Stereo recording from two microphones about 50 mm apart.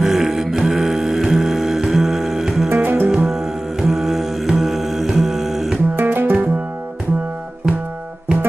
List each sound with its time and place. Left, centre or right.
0.0 s music: centre
2.7 s music: right
3.1 s music: centre
5.9 s music: right